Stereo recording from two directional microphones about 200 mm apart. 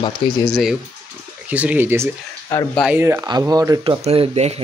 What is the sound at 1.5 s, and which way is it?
Speech, 5° right (ahead or behind).